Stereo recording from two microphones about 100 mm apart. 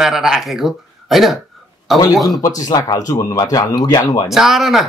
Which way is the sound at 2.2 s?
35° left (ahead or behind).